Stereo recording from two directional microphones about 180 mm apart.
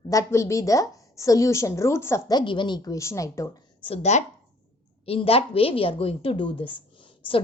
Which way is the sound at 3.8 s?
35° left (ahead or behind).